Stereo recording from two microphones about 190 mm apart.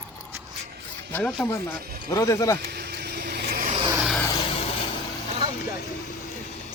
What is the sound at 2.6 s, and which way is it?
Vehicle, 60° right (ahead or behind).